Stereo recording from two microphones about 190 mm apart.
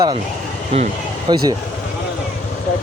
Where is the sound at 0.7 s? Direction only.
30° right (ahead or behind).